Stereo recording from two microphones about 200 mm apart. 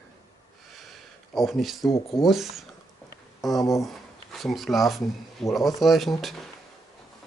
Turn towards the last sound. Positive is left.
turn(degrees=0)  # may be behind; listen again after turning